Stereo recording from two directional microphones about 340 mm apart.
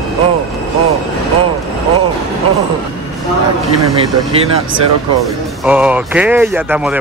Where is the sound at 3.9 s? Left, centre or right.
Centre.